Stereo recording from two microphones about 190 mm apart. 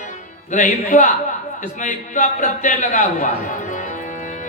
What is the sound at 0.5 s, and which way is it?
Speech, 40° left (ahead or behind).